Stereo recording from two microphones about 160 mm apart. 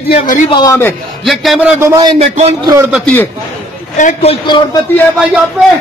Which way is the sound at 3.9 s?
45° left (ahead or behind).